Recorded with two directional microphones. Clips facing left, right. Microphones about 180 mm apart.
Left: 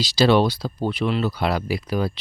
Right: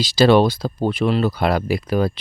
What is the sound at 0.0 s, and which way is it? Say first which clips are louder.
Speech: right 4 dB; 50° right (ahead or behind).